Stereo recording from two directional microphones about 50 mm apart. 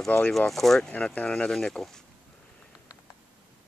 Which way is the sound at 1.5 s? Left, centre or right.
Centre.